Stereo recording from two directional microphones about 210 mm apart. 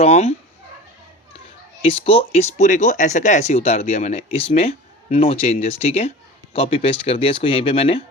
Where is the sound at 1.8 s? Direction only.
25° left (ahead or behind).